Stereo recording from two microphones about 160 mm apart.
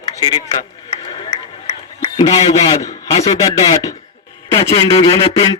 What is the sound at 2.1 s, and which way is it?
A man's voice, 30° left (ahead or behind).